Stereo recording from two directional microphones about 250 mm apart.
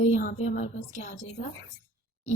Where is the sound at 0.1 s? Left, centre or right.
Left.